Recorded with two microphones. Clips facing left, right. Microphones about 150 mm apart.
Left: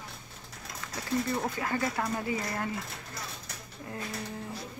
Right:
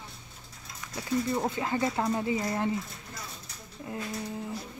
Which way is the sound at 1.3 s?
20° right (ahead or behind).